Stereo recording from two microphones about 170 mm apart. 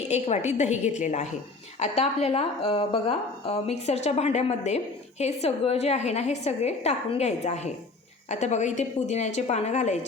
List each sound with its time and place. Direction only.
0.1 s a woman's voice: 40° left (ahead or behind)